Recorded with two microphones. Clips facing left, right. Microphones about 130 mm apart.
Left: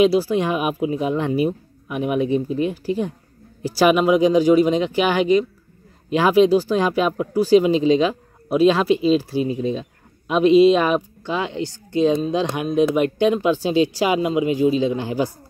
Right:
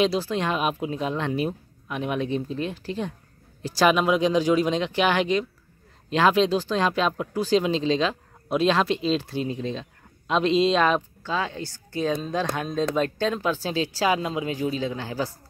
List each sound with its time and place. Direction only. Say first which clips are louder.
0.0 s speech: left 7 dB; 10° left (ahead or behind)